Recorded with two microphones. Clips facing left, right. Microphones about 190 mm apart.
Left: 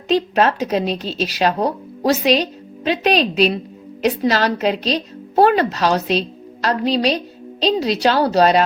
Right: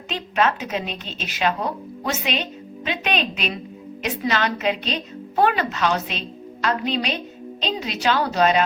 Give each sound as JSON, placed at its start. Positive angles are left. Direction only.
{"t": 0.1, "sound": "speech", "side_deg": 35}